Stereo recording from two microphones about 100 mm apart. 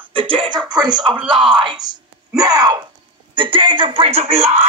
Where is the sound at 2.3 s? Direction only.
40° right (ahead or behind).